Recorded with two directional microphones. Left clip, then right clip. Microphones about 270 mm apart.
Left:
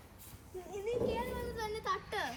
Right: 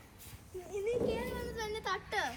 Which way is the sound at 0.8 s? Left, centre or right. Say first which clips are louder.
Right 1 dB; right.